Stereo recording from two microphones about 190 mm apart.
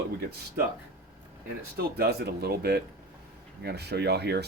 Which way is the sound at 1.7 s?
55° right (ahead or behind).